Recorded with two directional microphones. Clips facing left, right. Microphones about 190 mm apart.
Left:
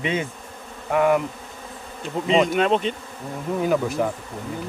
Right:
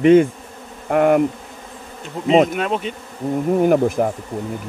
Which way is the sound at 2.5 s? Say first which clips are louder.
Left 2 dB; 5° right (ahead or behind).